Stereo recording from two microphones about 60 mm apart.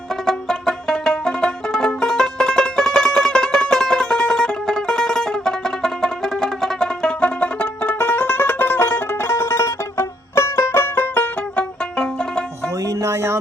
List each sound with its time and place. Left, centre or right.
0.3 s music: centre; by 11.6 s left
12.8 s music: right